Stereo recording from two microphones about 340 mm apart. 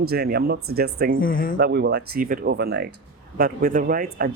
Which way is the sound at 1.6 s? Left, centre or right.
Right.